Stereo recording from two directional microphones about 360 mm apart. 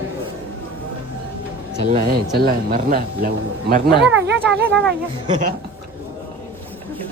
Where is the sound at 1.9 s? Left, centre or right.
Right.